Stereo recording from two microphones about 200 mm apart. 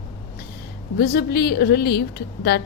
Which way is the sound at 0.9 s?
50° left (ahead or behind).